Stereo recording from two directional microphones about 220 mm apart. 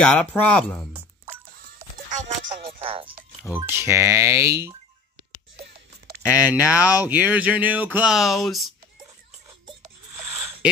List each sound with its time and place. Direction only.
0.0 s speech: 5° left (ahead or behind)
1.8 s music: 35° right (ahead or behind)
2.8 s music: 25° right (ahead or behind)
3.4 s speech: 10° right (ahead or behind)
6.2 s speech: 5° right (ahead or behind)
10.6 s speech: 5° right (ahead or behind)